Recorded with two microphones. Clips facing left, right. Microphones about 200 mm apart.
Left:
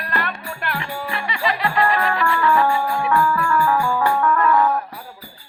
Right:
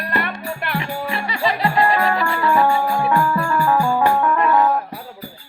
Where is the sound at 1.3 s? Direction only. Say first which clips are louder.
Right 2 dB; 35° right (ahead or behind).